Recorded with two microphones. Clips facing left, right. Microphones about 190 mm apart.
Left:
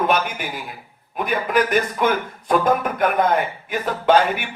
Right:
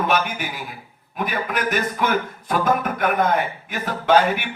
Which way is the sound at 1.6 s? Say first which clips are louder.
Left 3 dB; 55° left (ahead or behind).